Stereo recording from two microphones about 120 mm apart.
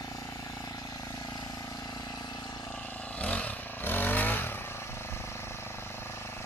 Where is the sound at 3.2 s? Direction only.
10° left (ahead or behind).